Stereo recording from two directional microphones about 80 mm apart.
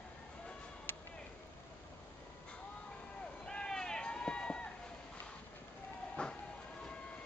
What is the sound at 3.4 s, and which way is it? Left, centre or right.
Run, centre.